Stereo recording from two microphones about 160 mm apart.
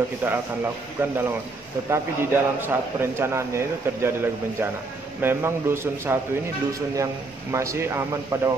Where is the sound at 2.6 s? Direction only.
15° right (ahead or behind).